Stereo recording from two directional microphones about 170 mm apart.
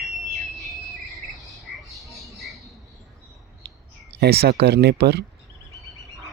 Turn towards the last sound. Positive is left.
turn(degrees=-70)  # may be behind; listen again after turning